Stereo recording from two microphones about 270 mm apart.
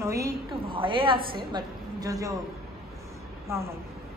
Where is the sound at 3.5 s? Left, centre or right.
Centre.